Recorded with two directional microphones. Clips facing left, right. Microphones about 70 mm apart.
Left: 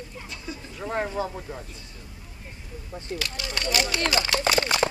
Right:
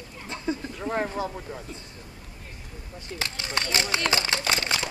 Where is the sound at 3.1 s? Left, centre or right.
Right.